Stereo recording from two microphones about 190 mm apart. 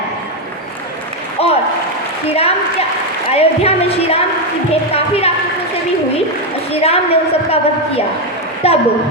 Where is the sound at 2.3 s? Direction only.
30° left (ahead or behind).